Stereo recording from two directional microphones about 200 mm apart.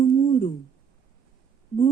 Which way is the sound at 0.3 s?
25° left (ahead or behind).